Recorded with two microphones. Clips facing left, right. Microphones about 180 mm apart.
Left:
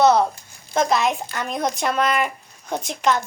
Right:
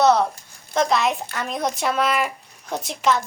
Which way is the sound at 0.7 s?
Centre (ahead or behind).